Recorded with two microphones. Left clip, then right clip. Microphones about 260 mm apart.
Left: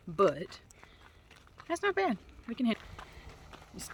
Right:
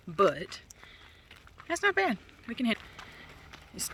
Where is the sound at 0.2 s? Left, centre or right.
Centre.